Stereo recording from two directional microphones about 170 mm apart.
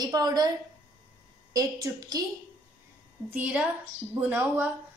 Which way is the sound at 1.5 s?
20° right (ahead or behind).